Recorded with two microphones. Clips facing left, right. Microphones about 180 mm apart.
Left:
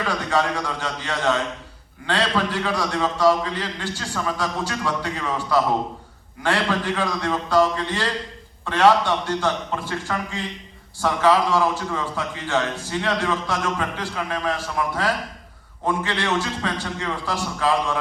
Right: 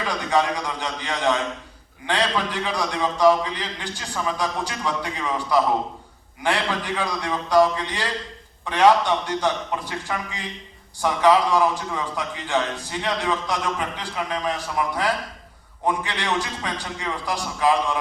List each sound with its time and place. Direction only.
0.3 s a man's voice: 15° right (ahead or behind)